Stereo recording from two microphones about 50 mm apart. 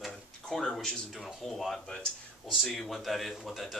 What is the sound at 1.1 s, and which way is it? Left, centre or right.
Speech, centre.